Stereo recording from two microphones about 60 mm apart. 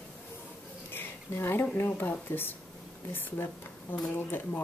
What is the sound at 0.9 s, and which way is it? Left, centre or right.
Speech, left.